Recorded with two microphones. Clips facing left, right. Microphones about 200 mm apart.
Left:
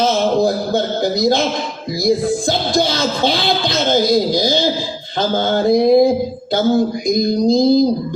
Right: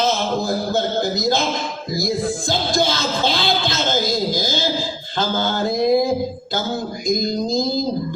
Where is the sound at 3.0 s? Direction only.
55° left (ahead or behind).